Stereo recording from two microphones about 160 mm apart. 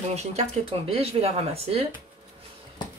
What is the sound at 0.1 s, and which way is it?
Speech, 45° right (ahead or behind).